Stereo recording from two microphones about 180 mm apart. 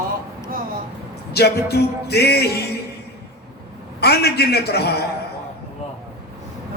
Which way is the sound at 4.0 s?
60° left (ahead or behind).